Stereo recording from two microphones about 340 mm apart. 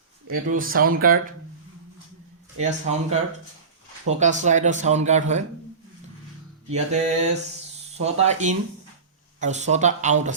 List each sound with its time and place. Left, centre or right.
0.3 s speech: right
2.6 s speech: centre
6.7 s speech: centre